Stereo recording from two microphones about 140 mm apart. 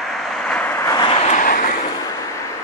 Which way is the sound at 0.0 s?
Centre (ahead or behind).